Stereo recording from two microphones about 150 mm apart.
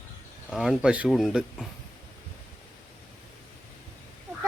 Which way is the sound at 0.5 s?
Centre (ahead or behind).